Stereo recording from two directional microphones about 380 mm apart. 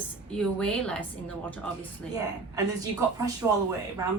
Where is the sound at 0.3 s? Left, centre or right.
Centre.